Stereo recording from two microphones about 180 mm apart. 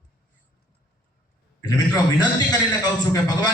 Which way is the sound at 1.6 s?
20° left (ahead or behind).